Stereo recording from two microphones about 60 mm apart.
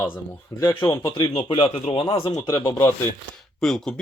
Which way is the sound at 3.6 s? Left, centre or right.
Centre.